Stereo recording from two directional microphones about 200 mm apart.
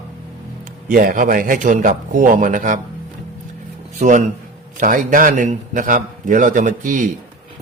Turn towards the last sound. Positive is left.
turn(degrees=-40)  # may be behind; listen again after turning